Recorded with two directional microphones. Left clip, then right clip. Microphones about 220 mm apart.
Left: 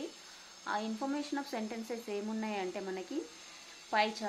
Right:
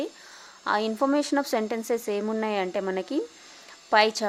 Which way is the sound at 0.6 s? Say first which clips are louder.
Right 12 dB; 50° right (ahead or behind).